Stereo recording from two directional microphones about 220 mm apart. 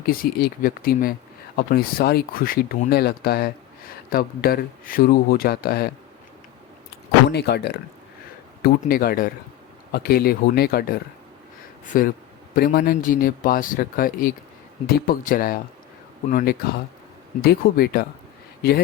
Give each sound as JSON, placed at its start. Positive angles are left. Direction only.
{"t": 0.0, "sound": "speech", "side_deg": 40}
{"t": 7.3, "sound": "speech", "side_deg": 50}